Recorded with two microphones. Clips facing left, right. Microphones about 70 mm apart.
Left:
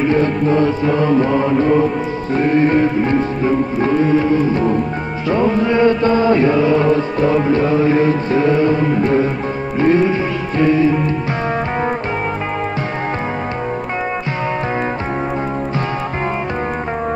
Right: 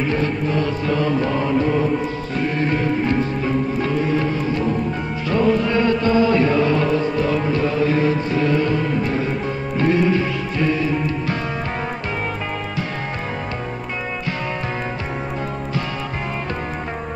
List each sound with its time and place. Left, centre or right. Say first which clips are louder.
0.1 s music: left 6 dB; left
5.3 s music: left 3 dB; left
6.5 s music: left 4 dB; centre
7.2 s music: left 5 dB; left
9.8 s music: left 4 dB; left